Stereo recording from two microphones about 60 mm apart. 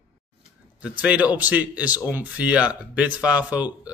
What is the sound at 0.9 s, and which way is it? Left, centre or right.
Speech, right.